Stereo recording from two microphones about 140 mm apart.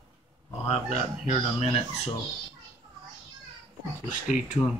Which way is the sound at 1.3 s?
45° left (ahead or behind).